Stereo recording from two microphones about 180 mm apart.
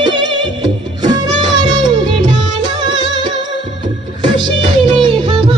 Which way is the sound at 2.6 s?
25° right (ahead or behind).